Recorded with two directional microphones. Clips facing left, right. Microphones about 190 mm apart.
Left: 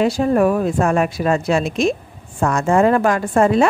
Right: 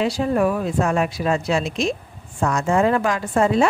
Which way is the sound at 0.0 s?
50° left (ahead or behind).